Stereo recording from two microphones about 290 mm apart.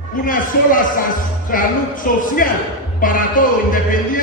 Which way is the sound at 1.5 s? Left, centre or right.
Left.